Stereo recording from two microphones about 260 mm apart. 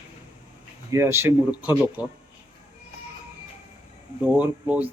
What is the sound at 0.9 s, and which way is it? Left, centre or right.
Speech, centre.